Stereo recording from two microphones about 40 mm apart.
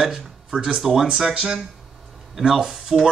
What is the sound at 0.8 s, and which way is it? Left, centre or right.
Speech, centre.